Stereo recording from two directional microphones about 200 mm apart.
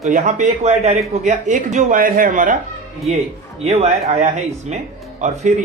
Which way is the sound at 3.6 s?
30° right (ahead or behind).